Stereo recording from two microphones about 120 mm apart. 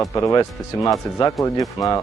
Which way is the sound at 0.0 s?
25° left (ahead or behind).